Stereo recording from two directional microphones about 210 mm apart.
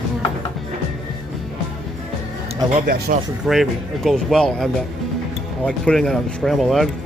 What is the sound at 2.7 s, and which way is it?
Speech, 40° right (ahead or behind).